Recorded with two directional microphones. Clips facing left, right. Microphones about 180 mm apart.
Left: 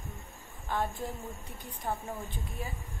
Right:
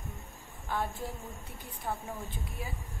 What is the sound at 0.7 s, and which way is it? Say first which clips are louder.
Speech: left 1 dB; 20° left (ahead or behind).